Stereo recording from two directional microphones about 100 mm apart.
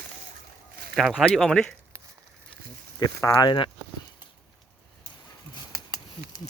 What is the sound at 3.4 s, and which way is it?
Speech, 50° left (ahead or behind).